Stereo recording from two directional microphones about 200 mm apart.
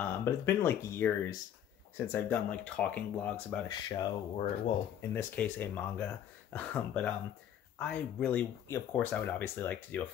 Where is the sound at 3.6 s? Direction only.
20° left (ahead or behind).